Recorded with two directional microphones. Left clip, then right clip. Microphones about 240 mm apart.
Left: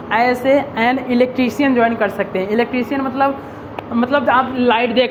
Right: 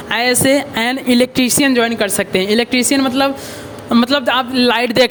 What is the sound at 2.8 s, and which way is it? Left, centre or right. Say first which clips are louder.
Speech: right 3 dB; right.